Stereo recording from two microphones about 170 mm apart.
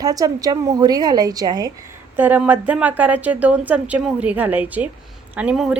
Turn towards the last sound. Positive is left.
turn(degrees=-5)  # may be behind; listen again after turning